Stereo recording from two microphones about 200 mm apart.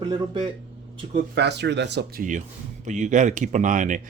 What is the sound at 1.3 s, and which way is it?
Speech, 60° right (ahead or behind).